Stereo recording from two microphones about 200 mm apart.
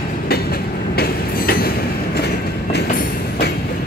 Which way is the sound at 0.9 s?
50° left (ahead or behind).